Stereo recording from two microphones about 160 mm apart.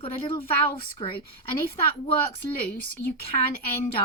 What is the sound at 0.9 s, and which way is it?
Speech, 35° left (ahead or behind).